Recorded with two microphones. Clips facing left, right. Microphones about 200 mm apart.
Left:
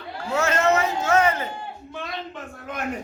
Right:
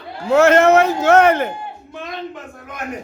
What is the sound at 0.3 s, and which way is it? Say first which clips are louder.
A man's voice: right 10 dB; 80° right.